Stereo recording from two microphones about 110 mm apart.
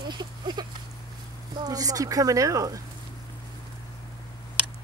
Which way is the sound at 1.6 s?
35° right (ahead or behind).